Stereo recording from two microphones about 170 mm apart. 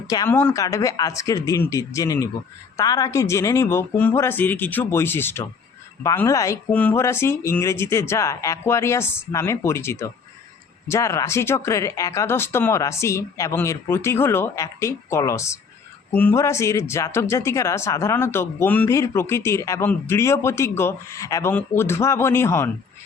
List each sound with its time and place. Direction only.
0.1 s speech: 20° left (ahead or behind)